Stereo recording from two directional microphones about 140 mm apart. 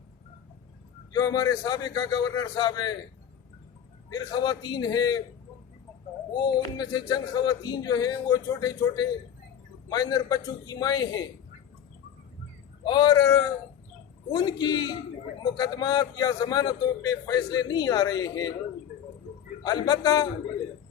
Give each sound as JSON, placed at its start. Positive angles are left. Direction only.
{"t": 1.1, "sound": "a man's voice", "side_deg": 25}
{"t": 4.1, "sound": "a man's voice", "side_deg": 30}
{"t": 6.3, "sound": "a man's voice", "side_deg": 30}
{"t": 12.8, "sound": "a man's voice", "side_deg": 30}
{"t": 19.6, "sound": "a man's voice", "side_deg": 30}